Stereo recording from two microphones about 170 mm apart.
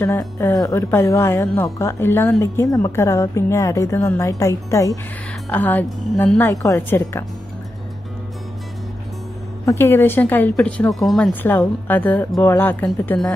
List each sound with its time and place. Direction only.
0.0 s a woman's voice: 15° left (ahead or behind)
9.7 s a woman's voice: 15° left (ahead or behind)